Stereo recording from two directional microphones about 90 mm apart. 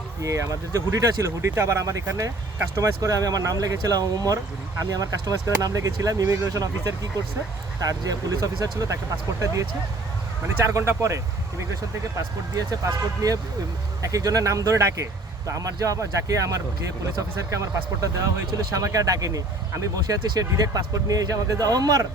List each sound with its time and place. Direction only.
0.2 s speech: 35° right (ahead or behind)
10.6 s speech: 35° right (ahead or behind)